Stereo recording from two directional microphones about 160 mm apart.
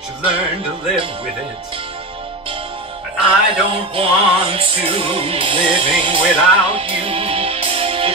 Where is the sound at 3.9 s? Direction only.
35° right (ahead or behind).